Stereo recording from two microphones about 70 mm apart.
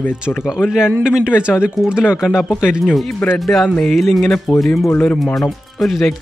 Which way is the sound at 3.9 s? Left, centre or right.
Centre.